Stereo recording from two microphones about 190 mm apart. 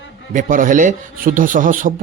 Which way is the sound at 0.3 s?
45° right (ahead or behind).